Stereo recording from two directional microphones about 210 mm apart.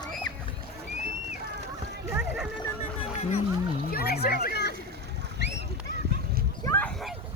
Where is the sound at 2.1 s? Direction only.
5° right (ahead or behind).